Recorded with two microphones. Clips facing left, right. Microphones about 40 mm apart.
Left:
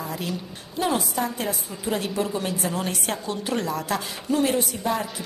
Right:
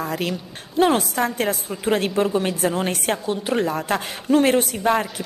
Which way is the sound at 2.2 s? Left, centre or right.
Right.